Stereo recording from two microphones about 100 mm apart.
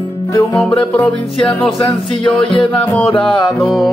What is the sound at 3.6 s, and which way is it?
Music, centre (ahead or behind).